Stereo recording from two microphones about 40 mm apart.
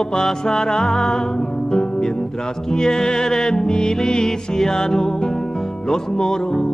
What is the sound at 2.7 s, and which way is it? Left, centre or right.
Music, centre.